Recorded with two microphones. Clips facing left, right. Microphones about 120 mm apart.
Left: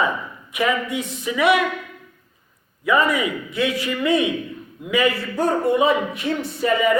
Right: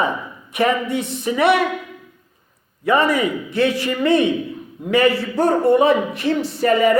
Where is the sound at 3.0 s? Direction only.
35° right (ahead or behind).